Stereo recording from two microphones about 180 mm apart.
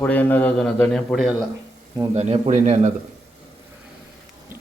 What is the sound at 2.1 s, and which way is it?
Speech, 40° right (ahead or behind).